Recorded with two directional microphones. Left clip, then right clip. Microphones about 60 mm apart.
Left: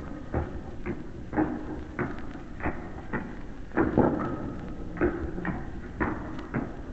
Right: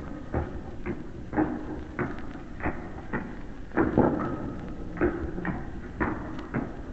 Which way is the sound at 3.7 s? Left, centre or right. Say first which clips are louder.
Right 1 dB; left.